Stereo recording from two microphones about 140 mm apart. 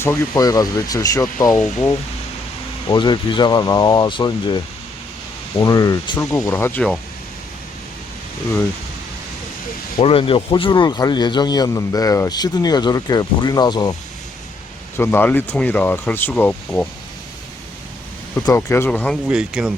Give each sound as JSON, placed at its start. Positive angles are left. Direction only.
{"t": 0.0, "sound": "a man's voice", "side_deg": 25}
{"t": 2.9, "sound": "a man's voice", "side_deg": 35}
{"t": 10.0, "sound": "a man's voice", "side_deg": 40}
{"t": 14.9, "sound": "speech", "side_deg": 15}
{"t": 18.4, "sound": "speech", "side_deg": 15}
{"t": 18.9, "sound": "speech", "side_deg": 5}
{"t": 19.3, "sound": "speech", "side_deg": -5}